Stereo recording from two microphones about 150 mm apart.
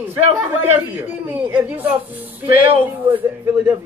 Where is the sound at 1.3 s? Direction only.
10° right (ahead or behind).